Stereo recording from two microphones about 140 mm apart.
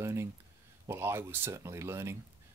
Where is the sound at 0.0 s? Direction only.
20° right (ahead or behind).